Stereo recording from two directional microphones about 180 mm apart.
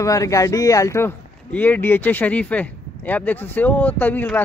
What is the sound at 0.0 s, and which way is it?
Speech, 20° left (ahead or behind).